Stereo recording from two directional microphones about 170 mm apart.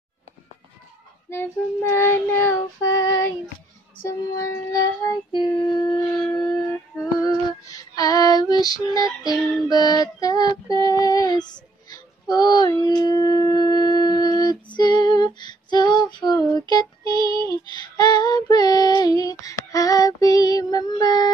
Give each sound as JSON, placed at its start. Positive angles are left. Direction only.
{"t": 1.3, "sound": "child singing", "side_deg": 15}
{"t": 5.0, "sound": "music", "side_deg": 25}
{"t": 7.2, "sound": "female singing", "side_deg": 20}
{"t": 12.8, "sound": "shofar", "side_deg": 20}
{"t": 17.3, "sound": "female singing", "side_deg": 25}